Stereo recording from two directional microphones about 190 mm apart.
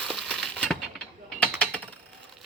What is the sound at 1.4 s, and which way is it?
Typing, 5° left (ahead or behind).